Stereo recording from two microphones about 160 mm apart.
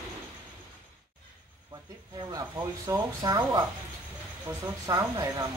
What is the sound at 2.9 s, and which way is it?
Speech, 25° right (ahead or behind).